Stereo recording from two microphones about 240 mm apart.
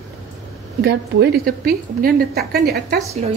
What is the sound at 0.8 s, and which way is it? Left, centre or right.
A woman's voice, right.